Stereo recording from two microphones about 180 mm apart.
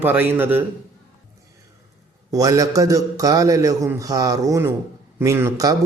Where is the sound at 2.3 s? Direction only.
20° right (ahead or behind).